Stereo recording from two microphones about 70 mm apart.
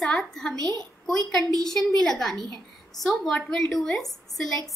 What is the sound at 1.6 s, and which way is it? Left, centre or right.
A woman's voice, centre.